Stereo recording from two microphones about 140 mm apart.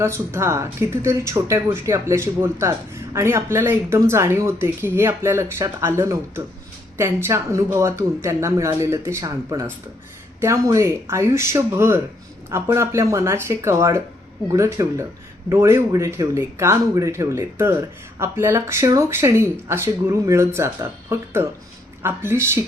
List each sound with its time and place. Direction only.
0.0 s speech: 20° right (ahead or behind)